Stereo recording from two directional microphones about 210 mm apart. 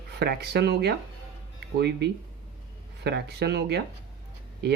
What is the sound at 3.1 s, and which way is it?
Speech, 50° right (ahead or behind).